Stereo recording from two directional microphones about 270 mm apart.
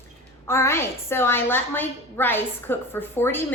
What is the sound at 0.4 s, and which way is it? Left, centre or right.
A woman's voice, centre.